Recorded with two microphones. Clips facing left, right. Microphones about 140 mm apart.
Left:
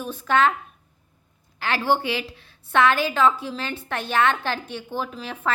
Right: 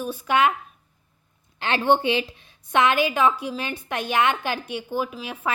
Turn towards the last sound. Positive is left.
turn(degrees=-10)  # may be behind; listen again after turning